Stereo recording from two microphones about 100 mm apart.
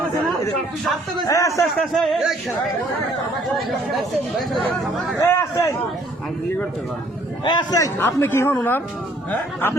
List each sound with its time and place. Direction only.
1.3 s speech: 30° left (ahead or behind)
1.7 s speech: 5° left (ahead or behind)
5.2 s a man's voice: 25° left (ahead or behind)
7.4 s a man's voice: 45° left (ahead or behind)
7.9 s a woman's voice: 25° left (ahead or behind)